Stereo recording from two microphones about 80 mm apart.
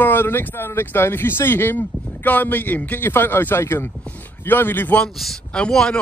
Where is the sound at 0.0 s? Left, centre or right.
Left.